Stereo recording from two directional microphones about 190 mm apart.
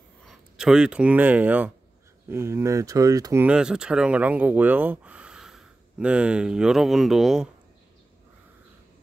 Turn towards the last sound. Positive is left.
turn(degrees=0)  # may be behind; listen again after turning